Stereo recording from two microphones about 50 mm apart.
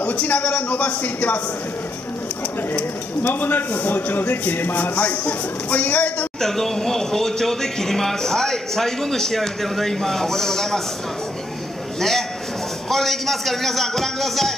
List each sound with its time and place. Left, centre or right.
0.0 s a man's voice: left
2.7 s a man's voice: left
6.4 s speech: centre
12.0 s a man's voice: centre